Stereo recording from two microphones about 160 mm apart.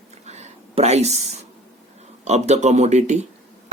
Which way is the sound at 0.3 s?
45° right (ahead or behind).